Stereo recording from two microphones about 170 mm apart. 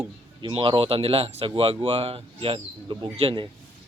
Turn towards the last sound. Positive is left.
turn(degrees=-35)  # may be behind; listen again after turning